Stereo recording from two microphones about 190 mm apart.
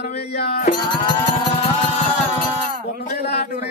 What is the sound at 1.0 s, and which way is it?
Music, 25° left (ahead or behind).